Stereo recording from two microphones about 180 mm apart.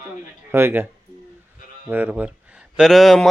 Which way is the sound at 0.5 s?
15° right (ahead or behind).